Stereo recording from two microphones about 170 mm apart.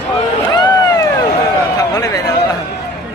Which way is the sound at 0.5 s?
25° left (ahead or behind).